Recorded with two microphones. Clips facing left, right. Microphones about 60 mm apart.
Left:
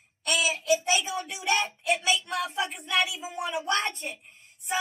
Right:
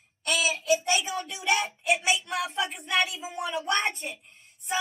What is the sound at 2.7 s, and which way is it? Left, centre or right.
A woman's voice, centre.